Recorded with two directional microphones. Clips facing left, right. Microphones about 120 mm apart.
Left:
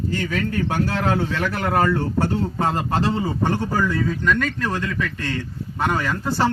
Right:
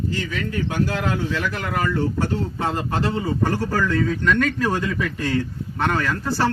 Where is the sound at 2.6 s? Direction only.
40° left (ahead or behind); by 3.9 s 20° left (ahead or behind).